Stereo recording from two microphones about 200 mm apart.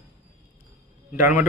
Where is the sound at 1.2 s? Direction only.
10° right (ahead or behind).